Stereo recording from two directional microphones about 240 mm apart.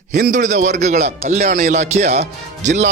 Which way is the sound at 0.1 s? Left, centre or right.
Right.